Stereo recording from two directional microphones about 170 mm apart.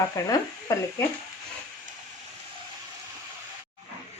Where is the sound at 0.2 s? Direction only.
20° left (ahead or behind).